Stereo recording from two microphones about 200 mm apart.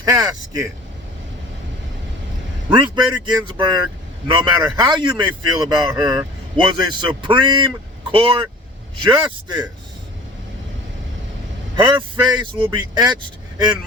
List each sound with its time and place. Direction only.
0.0 s speech: 20° right (ahead or behind)
2.6 s a man's voice: 25° right (ahead or behind)
11.8 s a man's voice: 25° right (ahead or behind)